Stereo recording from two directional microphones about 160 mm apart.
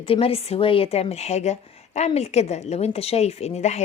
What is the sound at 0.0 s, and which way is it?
A woman's voice, 35° left (ahead or behind).